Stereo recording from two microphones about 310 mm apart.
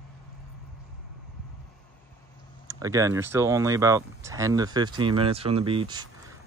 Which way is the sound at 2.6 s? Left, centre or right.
Centre.